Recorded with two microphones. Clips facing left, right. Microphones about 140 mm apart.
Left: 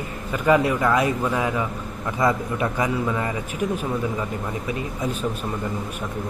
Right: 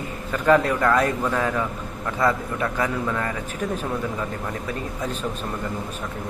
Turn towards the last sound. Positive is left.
turn(degrees=10)  # may be behind; listen again after turning